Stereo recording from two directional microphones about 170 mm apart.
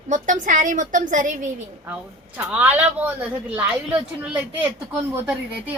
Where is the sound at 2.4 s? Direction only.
10° right (ahead or behind).